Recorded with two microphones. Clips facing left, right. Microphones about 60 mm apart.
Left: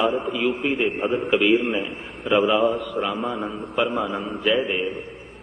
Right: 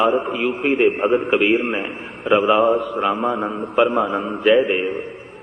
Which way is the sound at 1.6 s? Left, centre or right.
Right.